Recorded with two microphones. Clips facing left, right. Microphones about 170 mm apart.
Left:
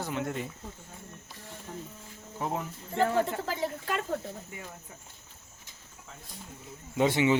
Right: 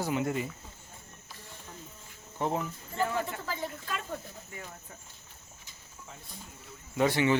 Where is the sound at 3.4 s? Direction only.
70° left (ahead or behind).